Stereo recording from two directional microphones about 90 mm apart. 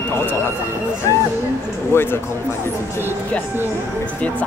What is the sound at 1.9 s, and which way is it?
Speech, 25° left (ahead or behind).